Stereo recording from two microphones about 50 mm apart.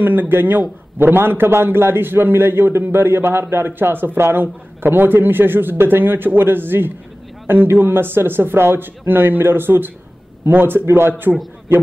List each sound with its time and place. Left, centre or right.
0.0 s a man's voice: right